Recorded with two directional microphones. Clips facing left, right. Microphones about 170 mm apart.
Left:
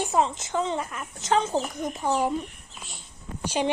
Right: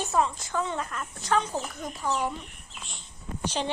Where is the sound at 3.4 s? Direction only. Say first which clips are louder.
Left 4 dB; 10° left (ahead or behind).